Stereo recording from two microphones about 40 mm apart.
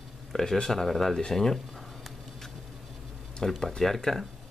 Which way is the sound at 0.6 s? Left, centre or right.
Centre.